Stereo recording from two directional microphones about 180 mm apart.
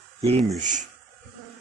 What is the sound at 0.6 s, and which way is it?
Speech, 45° right (ahead or behind).